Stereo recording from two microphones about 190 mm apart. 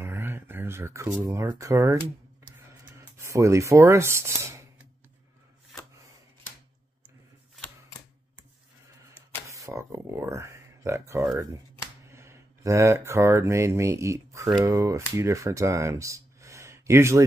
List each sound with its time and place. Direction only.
0.0 s speech: 10° right (ahead or behind)
3.2 s speech: 15° right (ahead or behind)
9.5 s speech: 15° right (ahead or behind)